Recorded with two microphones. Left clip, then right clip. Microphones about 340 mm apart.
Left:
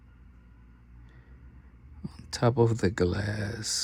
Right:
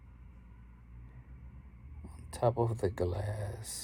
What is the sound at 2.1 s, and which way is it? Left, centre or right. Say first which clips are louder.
Speech: left 3 dB; left.